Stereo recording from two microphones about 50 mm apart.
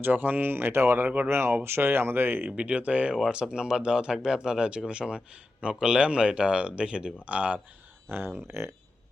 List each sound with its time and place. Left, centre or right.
0.0 s speech: right
2.6 s speech: right
3.5 s speech: centre
8.1 s speech: right
8.4 s speech: right